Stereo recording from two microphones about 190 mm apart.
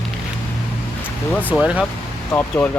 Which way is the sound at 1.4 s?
5° right (ahead or behind).